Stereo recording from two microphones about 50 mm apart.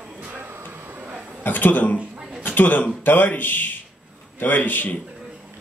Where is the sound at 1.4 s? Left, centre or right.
Left.